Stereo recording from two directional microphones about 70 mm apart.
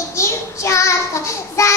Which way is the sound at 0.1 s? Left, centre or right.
Left.